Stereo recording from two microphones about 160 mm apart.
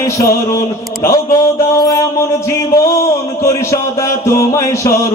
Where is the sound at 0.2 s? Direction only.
20° left (ahead or behind).